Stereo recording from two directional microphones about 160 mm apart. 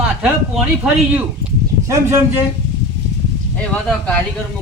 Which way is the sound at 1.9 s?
15° right (ahead or behind).